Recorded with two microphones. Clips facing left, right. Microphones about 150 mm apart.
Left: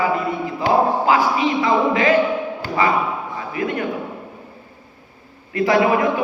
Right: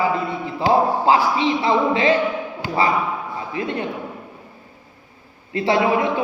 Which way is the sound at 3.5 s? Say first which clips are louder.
Left 2 dB; 25° right (ahead or behind).